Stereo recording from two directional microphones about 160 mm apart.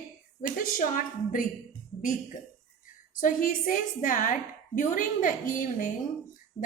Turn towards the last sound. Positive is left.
turn(degrees=55)  # may be behind; listen again after turning